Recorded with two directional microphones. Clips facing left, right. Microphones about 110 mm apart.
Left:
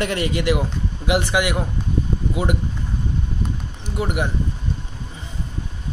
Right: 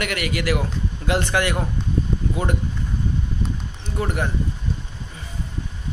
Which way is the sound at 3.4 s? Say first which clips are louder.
Left 1 dB; 10° left (ahead or behind).